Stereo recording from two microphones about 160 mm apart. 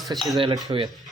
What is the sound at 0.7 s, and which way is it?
Speech, 35° right (ahead or behind).